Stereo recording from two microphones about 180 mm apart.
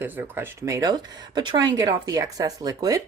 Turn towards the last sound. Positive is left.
turn(degrees=-20)  # may be behind; listen again after turning